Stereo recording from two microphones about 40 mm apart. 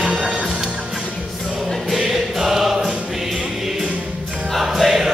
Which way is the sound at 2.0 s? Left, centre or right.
Centre.